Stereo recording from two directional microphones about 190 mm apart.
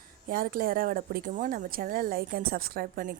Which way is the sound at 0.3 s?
45° right (ahead or behind).